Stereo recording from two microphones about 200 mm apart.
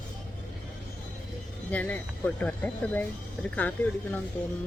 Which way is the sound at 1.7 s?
5° left (ahead or behind).